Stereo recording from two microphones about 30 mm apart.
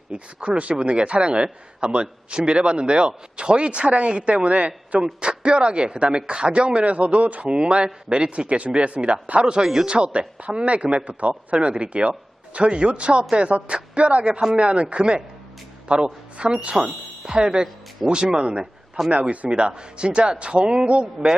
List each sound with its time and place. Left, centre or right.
0.1 s speech: right
0.8 s a man's voice: right
5.2 s a man's voice: right
7.5 s a man's voice: right
8.4 s speech: right
9.4 s a man's voice: right
11.6 s a man's voice: right
19.0 s a man's voice: centre
19.5 s a man's voice: right